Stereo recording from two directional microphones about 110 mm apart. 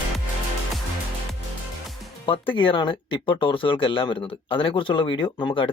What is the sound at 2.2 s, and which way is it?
Speech, 50° left (ahead or behind).